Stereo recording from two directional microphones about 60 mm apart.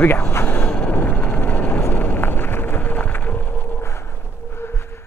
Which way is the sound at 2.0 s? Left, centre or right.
Left.